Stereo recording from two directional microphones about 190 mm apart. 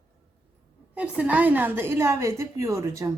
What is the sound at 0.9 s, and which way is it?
A woman's voice, 5° right (ahead or behind).